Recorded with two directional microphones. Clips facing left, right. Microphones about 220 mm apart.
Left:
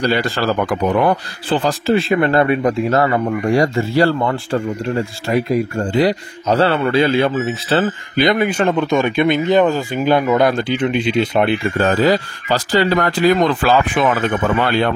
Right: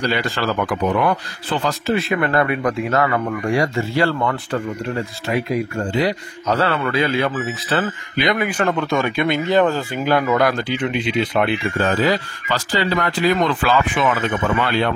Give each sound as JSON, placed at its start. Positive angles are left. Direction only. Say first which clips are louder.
{"t": 0.0, "sound": "a man's voice", "louder": "left 4 dB", "side_deg": 35}
{"t": 11.7, "sound": "a man's voice", "louder": "left 5 dB", "side_deg": 45}